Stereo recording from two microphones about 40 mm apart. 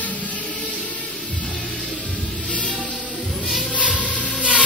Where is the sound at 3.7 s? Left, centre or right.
Left.